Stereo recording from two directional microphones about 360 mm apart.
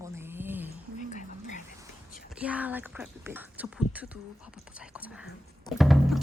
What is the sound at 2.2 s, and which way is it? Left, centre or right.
Speech, centre.